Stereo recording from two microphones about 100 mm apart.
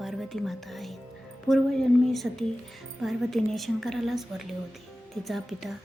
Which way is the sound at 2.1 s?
Centre (ahead or behind).